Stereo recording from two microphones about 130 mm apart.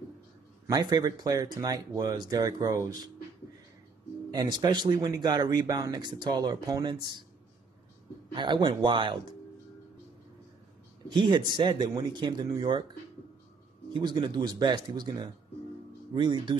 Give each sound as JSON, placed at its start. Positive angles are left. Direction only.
{"t": 0.7, "sound": "speech", "side_deg": -30}
{"t": 4.3, "sound": "speech", "side_deg": -35}
{"t": 8.3, "sound": "speech", "side_deg": -35}
{"t": 11.1, "sound": "speech", "side_deg": -35}
{"t": 13.9, "sound": "speech", "side_deg": -35}